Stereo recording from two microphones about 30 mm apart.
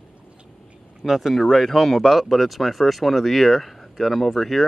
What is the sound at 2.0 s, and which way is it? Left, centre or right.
Speech, centre.